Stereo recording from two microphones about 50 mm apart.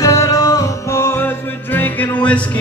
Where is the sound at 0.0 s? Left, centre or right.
Left.